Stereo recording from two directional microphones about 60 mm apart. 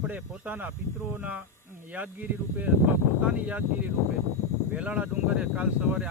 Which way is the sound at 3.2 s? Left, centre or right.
Right.